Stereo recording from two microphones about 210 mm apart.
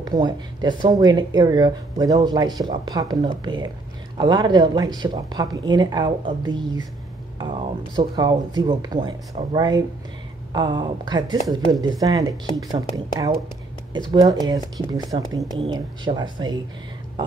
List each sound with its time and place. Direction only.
0.0 s speech: 20° right (ahead or behind)